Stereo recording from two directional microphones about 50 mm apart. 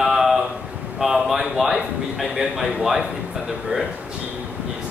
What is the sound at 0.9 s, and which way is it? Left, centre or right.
A man's voice, centre.